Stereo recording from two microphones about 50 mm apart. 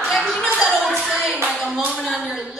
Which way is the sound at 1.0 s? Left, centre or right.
Centre.